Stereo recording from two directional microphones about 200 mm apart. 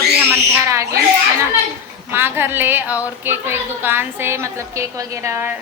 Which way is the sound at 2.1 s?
10° right (ahead or behind).